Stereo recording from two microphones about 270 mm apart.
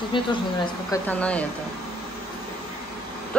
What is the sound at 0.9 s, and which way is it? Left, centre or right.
Speech, centre.